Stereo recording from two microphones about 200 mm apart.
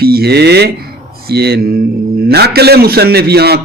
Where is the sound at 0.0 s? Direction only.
50° right (ahead or behind).